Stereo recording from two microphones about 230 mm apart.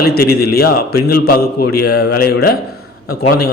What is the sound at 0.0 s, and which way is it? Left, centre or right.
A man's voice, left.